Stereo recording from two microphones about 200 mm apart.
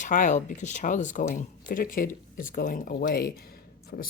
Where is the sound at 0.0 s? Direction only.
40° left (ahead or behind).